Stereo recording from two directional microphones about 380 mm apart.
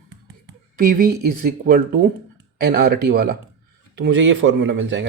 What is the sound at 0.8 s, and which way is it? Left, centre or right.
Speech, right.